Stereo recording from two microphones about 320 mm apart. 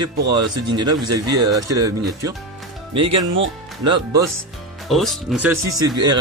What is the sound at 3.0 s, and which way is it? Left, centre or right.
Speech, right.